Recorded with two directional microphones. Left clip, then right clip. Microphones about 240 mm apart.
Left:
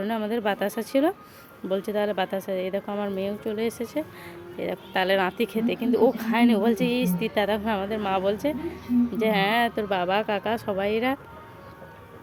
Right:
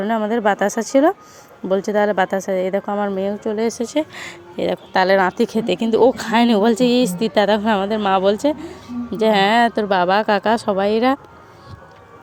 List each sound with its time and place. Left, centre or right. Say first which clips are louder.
0.0 s speech: right 9 dB; centre